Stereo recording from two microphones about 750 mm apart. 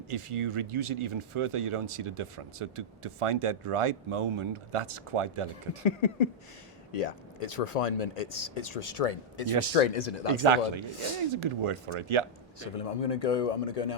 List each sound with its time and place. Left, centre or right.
0.1 s speech: right
5.8 s speech: left
10.3 s speech: right
12.5 s speech: left